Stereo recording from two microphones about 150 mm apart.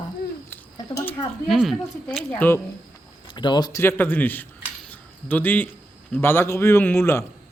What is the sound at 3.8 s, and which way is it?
Speech, 15° left (ahead or behind).